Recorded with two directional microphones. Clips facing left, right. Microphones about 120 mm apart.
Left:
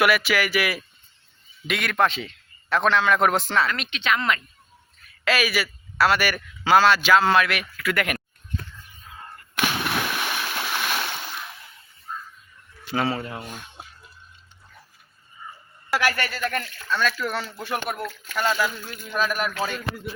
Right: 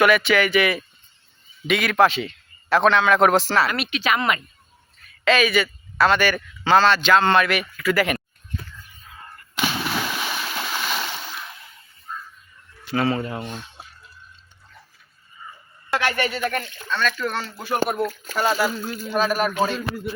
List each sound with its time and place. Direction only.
0.0 s a man's voice: 5° left (ahead or behind)
5.2 s speech: 5° left (ahead or behind)
9.6 s splash: 5° left (ahead or behind)
12.1 s music: 5° left (ahead or behind)
12.9 s speech: 5° left (ahead or behind)
16.0 s speech: 25° right (ahead or behind)
16.9 s speech: 5° left (ahead or behind)
17.7 s speech: 30° right (ahead or behind)